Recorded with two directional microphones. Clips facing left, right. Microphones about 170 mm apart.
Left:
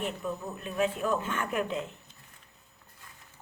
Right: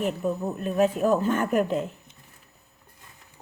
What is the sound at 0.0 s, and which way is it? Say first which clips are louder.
Speech: right 7 dB; 40° right (ahead or behind).